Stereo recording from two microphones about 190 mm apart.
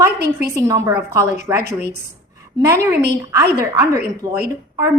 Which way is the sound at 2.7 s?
15° right (ahead or behind).